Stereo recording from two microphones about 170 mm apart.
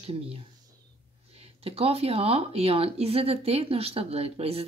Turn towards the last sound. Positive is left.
turn(degrees=-35)  # may be behind; listen again after turning